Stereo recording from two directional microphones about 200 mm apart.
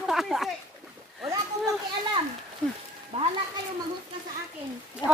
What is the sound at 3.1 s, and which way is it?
Speech, 30° right (ahead or behind).